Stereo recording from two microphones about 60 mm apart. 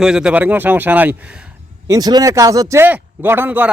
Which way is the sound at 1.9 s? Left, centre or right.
Right.